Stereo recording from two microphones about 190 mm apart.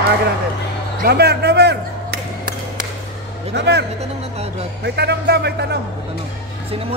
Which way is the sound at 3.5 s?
65° right (ahead or behind).